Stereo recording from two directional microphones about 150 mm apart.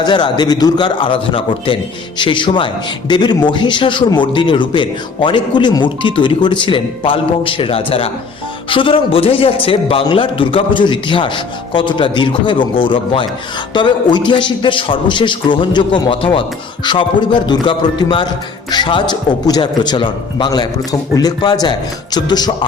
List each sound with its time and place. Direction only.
0.0 s speech: 30° left (ahead or behind)